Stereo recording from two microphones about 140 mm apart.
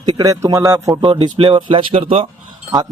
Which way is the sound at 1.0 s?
40° right (ahead or behind).